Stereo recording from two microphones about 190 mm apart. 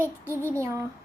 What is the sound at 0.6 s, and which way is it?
Speech, 15° right (ahead or behind).